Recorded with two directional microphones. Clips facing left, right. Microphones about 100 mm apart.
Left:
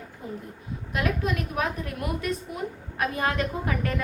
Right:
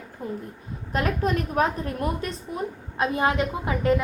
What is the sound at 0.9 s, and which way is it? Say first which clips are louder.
A woman's voice: right 3 dB; 40° right (ahead or behind).